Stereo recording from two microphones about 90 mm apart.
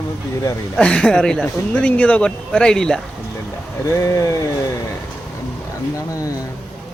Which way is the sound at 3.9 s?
35° left (ahead or behind).